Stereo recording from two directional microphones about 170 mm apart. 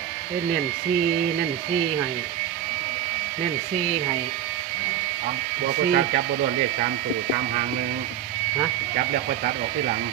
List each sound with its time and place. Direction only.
5.9 s speech: 60° right (ahead or behind)